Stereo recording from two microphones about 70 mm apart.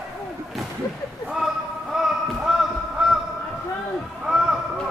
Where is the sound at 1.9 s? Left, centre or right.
Centre.